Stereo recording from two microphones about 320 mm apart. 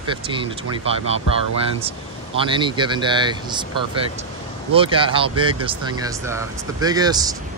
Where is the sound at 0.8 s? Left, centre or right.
Centre.